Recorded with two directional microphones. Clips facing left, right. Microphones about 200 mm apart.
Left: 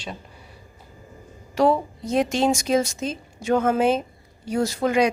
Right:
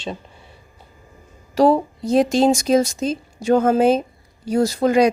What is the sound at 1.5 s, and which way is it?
Speech, 35° right (ahead or behind).